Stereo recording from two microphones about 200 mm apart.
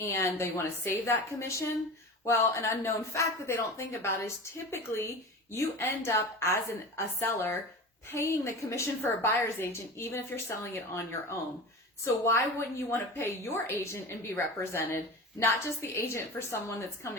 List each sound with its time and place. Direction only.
0.0 s speech: 10° left (ahead or behind)